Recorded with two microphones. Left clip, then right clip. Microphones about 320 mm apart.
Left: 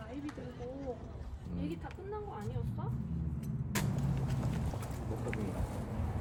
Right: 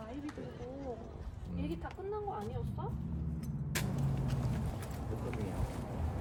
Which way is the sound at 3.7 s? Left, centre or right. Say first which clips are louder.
Left 1 dB; centre.